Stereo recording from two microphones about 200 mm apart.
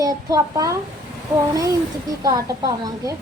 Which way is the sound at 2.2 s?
20° right (ahead or behind).